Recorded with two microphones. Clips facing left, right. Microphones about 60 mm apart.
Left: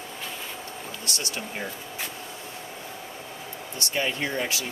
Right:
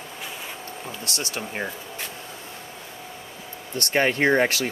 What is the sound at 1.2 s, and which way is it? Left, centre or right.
Speech, right.